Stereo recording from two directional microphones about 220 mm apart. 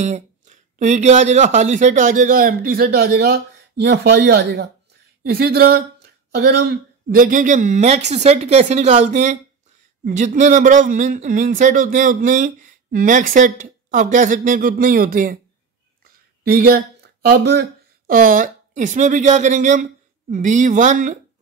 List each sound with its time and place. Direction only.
0.0 s a man's voice: 35° right (ahead or behind)
16.4 s a man's voice: 45° right (ahead or behind)